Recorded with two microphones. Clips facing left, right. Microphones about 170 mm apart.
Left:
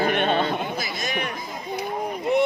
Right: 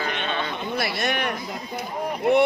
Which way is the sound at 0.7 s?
65° right (ahead or behind).